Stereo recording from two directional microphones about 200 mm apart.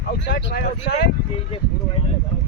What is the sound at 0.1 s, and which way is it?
Speech, 55° left (ahead or behind).